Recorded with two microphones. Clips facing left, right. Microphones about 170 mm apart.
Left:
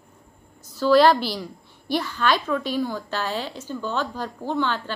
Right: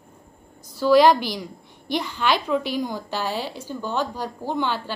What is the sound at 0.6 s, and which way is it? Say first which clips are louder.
A woman's voice: right 1 dB; 15° right (ahead or behind).